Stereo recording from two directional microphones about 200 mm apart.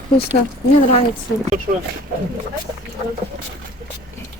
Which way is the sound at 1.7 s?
40° right (ahead or behind).